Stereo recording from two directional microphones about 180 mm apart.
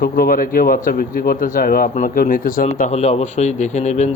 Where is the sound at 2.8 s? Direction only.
40° left (ahead or behind).